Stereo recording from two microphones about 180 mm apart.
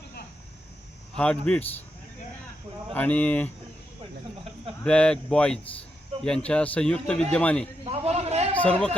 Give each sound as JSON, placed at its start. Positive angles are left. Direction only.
{"t": 1.1, "sound": "speech", "side_deg": 5}
{"t": 2.9, "sound": "speech", "side_deg": 10}
{"t": 4.8, "sound": "a man's voice", "side_deg": 5}
{"t": 7.9, "sound": "a sound", "side_deg": -35}
{"t": 8.5, "sound": "speech", "side_deg": 5}